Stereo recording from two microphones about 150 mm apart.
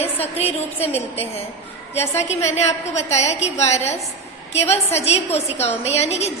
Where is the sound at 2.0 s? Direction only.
15° left (ahead or behind).